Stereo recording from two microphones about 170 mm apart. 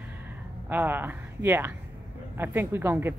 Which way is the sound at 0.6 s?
10° right (ahead or behind).